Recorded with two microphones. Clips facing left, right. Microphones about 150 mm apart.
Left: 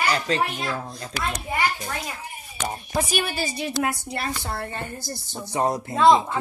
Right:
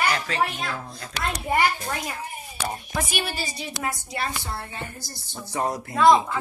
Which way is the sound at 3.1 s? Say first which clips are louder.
Left 4 dB; 50° left (ahead or behind).